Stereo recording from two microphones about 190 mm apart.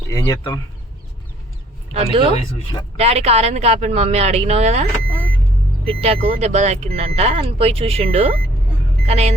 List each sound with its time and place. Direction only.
0.1 s speech: 15° left (ahead or behind)
1.9 s speech: 35° right (ahead or behind)